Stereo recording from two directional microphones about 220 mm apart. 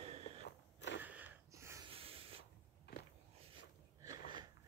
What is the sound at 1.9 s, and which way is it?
Sanding, 25° right (ahead or behind).